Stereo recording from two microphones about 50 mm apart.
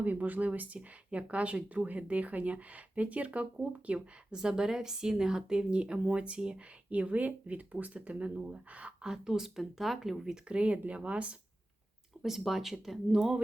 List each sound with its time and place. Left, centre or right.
0.0 s speech: right
4.4 s speech: centre
9.0 s speech: centre
10.5 s speech: right
12.2 s speech: centre